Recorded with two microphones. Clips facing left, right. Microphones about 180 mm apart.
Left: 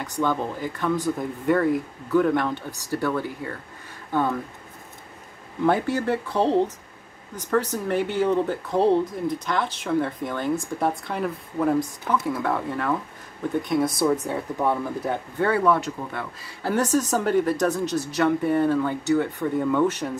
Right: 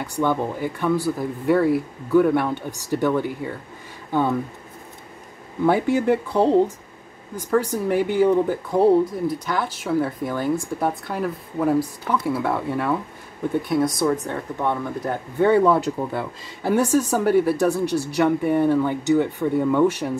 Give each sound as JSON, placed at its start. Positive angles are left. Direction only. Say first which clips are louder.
{"t": 0.0, "sound": "speech", "louder": "right 3 dB", "side_deg": -15}
{"t": 5.7, "sound": "speech", "louder": "right 4 dB", "side_deg": -15}
{"t": 15.3, "sound": "speech", "louder": "right 7 dB", "side_deg": -15}
{"t": 15.6, "sound": "speech", "louder": "right 3 dB", "side_deg": -30}
{"t": 16.6, "sound": "speech", "louder": "right 3 dB", "side_deg": -10}